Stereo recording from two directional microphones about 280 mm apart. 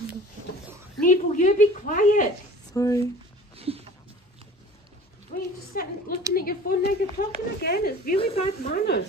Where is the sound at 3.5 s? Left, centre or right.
Right.